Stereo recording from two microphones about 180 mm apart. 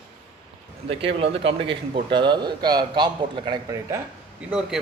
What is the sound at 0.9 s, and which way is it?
A man's voice, 30° right (ahead or behind).